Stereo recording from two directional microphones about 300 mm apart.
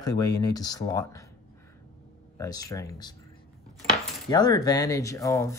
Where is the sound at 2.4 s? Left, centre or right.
Centre.